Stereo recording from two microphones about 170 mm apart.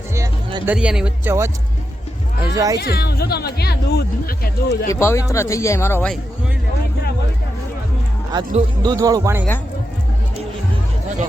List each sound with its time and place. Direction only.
0.6 s speech: 10° right (ahead or behind)
2.8 s speech: 65° left (ahead or behind)
4.9 s speech: 15° left (ahead or behind)
8.3 s speech: 25° right (ahead or behind)